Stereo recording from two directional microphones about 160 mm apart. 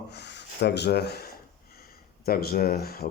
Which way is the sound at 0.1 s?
90° left.